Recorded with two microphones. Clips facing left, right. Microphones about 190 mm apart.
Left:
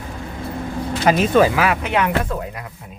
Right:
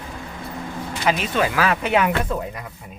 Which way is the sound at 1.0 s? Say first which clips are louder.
Left 7 dB; 45° left (ahead or behind).